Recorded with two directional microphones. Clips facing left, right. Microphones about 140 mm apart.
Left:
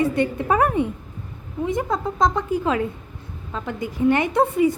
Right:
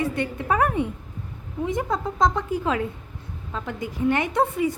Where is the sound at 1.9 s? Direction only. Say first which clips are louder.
Even; 40° left (ahead or behind); by 4.7 s 25° left (ahead or behind).